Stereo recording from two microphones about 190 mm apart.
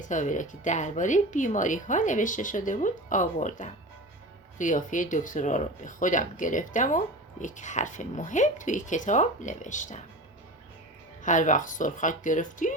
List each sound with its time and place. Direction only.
0.0 s speech: 40° left (ahead or behind)
11.2 s speech: 40° left (ahead or behind)